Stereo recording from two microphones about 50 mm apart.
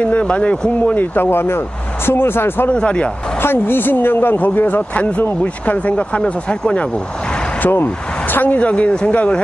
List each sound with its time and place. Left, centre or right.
0.0 s speech: left
1.1 s a woman's voice: left
2.7 s speech: left
3.3 s a woman's voice: left
7.6 s speech: left
8.5 s speech: left